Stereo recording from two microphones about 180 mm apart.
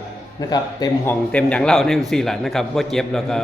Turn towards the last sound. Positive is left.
turn(degrees=0)  # may be behind; listen again after turning